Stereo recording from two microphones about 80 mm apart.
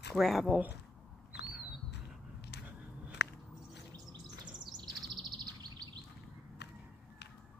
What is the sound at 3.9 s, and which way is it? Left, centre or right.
Chirp, right.